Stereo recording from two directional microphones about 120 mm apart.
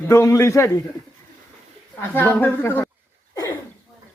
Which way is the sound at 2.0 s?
20° left (ahead or behind).